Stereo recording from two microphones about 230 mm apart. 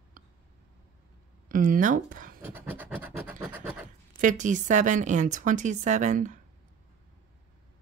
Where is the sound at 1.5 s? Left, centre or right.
Right.